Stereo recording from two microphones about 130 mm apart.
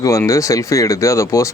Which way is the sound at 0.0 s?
25° left (ahead or behind).